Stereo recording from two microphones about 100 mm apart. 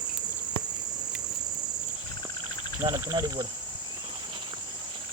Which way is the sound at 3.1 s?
40° right (ahead or behind).